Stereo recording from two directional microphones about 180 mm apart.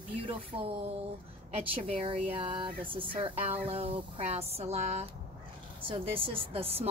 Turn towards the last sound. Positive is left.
turn(degrees=-30)  # may be behind; listen again after turning